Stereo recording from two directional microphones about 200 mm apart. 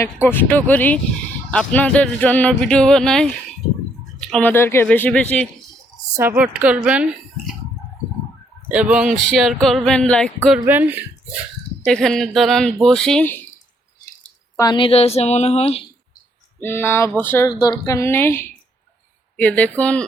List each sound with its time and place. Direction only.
0.0 s speech: 10° left (ahead or behind)
6.1 s speech: 10° right (ahead or behind)
8.7 s speech: 5° right (ahead or behind)
10.7 s speech: 10° right (ahead or behind)
11.9 s speech: centre (ahead or behind)
14.5 s a woman's voice: 20° left (ahead or behind)
16.6 s speech: 10° left (ahead or behind)